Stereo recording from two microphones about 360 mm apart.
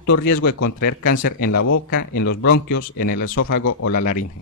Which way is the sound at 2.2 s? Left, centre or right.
Left.